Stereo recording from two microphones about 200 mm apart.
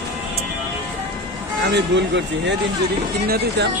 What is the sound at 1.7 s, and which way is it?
Speech, 60° right (ahead or behind).